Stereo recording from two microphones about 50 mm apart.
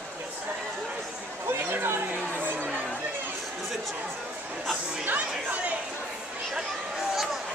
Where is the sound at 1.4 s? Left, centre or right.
Right.